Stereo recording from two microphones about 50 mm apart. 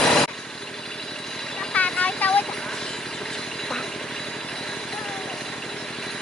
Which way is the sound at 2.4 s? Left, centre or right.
Centre.